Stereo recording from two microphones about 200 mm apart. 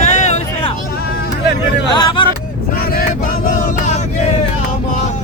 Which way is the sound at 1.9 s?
25° left (ahead or behind).